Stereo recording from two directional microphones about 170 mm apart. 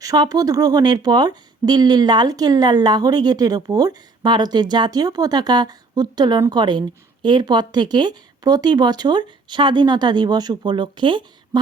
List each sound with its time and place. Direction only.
0.0 s speech: 20° right (ahead or behind)